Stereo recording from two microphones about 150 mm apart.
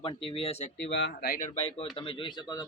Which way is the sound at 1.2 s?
70° left (ahead or behind).